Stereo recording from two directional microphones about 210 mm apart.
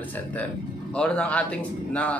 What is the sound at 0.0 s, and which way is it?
Speech, 5° left (ahead or behind).